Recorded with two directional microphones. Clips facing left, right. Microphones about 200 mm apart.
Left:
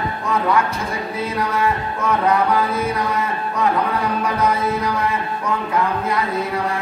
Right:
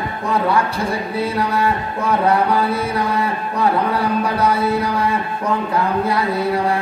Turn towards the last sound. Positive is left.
turn(degrees=-30)  # may be behind; listen again after turning